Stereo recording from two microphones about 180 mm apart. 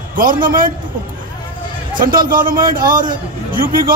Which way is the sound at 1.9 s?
50° right (ahead or behind).